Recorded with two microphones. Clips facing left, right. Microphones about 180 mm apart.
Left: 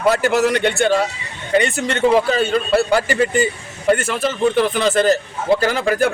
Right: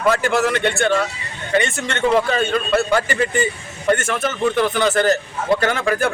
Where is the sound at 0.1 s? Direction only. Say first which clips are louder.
Left 2 dB; 40° left (ahead or behind).